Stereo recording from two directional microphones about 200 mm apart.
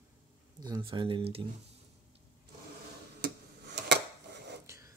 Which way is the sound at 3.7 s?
60° right (ahead or behind).